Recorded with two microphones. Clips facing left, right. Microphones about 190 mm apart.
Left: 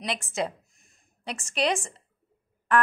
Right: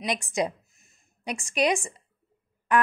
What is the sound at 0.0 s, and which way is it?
A woman's voice, 15° right (ahead or behind).